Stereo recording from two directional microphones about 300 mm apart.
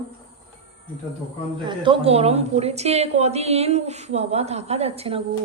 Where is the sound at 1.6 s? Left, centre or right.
Centre.